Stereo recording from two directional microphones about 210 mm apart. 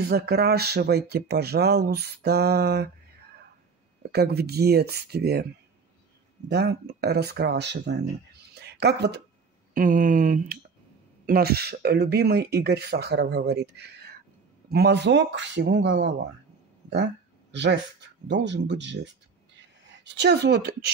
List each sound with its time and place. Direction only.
0.0 s speech: 50° right (ahead or behind)
4.1 s speech: 50° right (ahead or behind)
6.5 s speech: 50° right (ahead or behind)
9.8 s a woman's voice: 40° right (ahead or behind)